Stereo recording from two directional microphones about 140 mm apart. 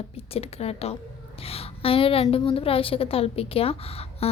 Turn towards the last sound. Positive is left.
turn(degrees=45)  # may be behind; listen again after turning